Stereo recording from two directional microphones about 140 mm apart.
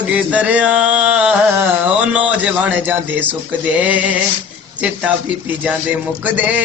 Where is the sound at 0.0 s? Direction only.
10° right (ahead or behind).